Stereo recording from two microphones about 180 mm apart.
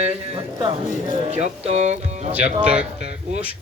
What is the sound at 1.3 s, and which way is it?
Speech, 40° right (ahead or behind).